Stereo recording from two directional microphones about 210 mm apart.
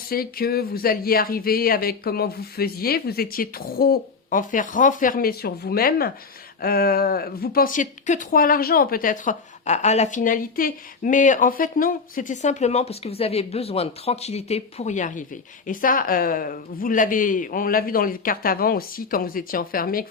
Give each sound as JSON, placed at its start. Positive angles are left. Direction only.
{"t": 0.1, "sound": "speech", "side_deg": 45}